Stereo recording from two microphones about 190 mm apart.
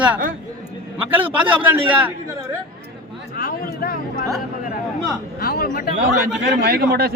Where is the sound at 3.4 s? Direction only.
50° left (ahead or behind).